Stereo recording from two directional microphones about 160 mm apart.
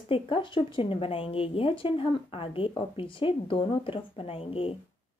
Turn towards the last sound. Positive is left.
turn(degrees=35)  # may be behind; listen again after turning